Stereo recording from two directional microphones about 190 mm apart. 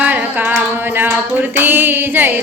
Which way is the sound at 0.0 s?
10° right (ahead or behind).